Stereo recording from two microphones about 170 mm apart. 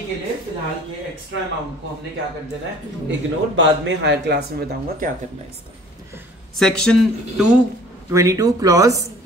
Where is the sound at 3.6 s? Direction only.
90° right; by 5.1 s 65° right (ahead or behind).